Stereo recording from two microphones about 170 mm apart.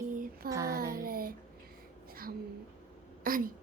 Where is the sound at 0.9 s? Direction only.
60° right (ahead or behind).